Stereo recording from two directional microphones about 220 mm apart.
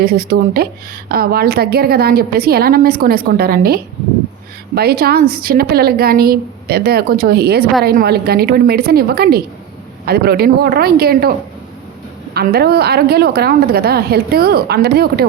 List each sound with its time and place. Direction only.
0.0 s a woman's voice: 45° right (ahead or behind)
12.3 s a woman's voice: 45° right (ahead or behind)